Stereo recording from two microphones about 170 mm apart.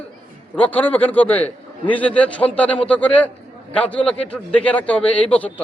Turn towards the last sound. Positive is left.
turn(degrees=10)  # may be behind; listen again after turning